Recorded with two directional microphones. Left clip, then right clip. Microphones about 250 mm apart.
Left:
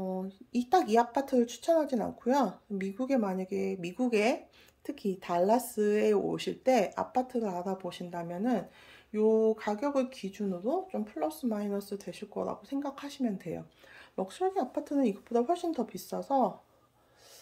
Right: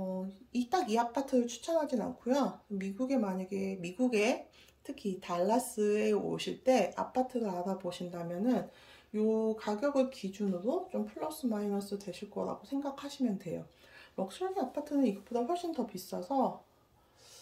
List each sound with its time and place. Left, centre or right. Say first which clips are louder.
0.5 s a woman's voice: left 5 dB; centre
9.3 s a sound: left 6 dB; left
9.6 s speech: even; centre